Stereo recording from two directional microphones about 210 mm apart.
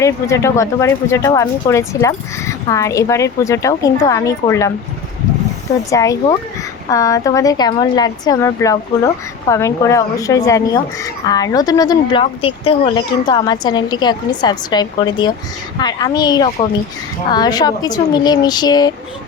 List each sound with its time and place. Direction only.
0.0 s speech: 15° left (ahead or behind)
5.9 s speech: 15° left (ahead or behind)